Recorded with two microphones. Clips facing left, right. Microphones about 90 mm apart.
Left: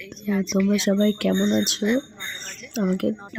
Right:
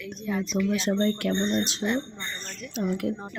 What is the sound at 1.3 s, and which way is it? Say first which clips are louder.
Speech: left 5 dB; 60° left (ahead or behind).